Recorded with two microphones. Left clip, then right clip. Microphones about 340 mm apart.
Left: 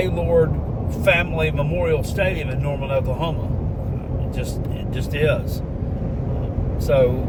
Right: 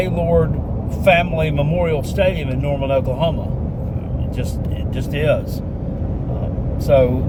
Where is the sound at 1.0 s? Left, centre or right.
Centre.